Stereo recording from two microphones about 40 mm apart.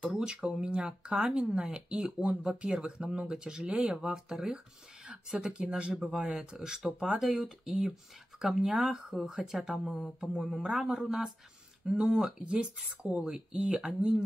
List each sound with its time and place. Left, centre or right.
0.2 s speech: centre
6.0 s speech: right
6.3 s speech: centre
11.8 s speech: centre
12.4 s speech: right; by 13.8 s centre
13.8 s speech: right